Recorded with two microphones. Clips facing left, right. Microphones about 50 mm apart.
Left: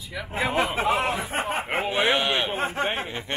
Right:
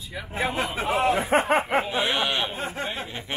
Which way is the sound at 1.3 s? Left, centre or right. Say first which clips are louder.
Right 7 dB; right.